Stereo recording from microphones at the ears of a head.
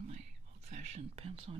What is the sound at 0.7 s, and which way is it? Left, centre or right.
Speech, right.